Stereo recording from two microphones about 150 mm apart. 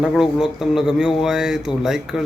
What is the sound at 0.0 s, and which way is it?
Speech, 5° right (ahead or behind).